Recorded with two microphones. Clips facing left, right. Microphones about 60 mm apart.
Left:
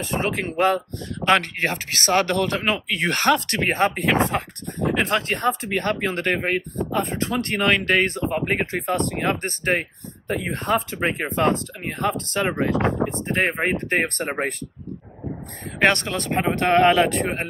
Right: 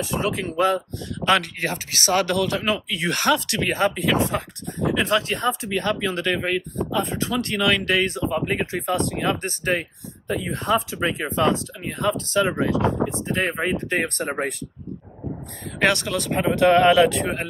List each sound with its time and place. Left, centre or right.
0.0 s speech: left
15.8 s speech: left